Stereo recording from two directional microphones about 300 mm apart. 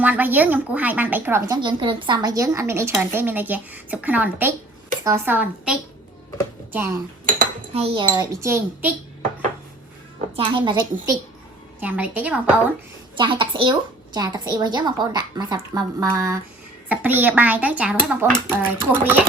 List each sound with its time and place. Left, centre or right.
0.0 s speech: centre
7.3 s speech: centre
10.3 s speech: centre
11.8 s a child's voice: centre
13.1 s a child's voice: centre